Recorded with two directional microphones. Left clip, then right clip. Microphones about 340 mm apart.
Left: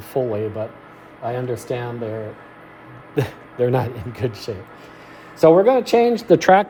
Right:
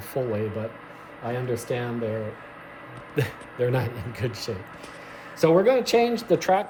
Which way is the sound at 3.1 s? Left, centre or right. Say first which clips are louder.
Left 5 dB; centre.